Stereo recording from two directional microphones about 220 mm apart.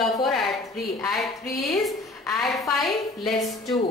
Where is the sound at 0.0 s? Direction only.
Centre (ahead or behind).